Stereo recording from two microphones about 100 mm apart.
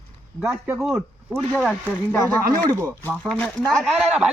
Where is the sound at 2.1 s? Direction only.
25° left (ahead or behind).